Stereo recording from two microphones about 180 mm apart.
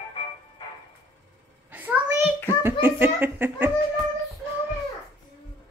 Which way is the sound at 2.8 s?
10° right (ahead or behind).